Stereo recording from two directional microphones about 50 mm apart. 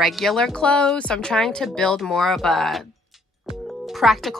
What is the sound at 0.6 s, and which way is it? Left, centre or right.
Speech, centre.